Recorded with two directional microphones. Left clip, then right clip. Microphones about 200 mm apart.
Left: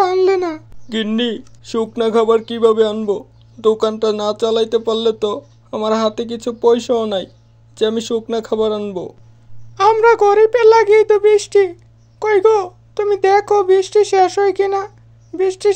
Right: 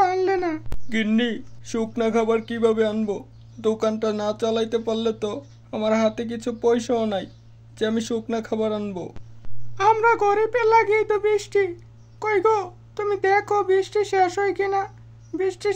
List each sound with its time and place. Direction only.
0.0 s child singing: 20° left (ahead or behind)
0.8 s speech: 20° left (ahead or behind)